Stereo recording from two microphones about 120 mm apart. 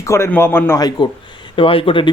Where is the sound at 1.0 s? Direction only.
35° left (ahead or behind).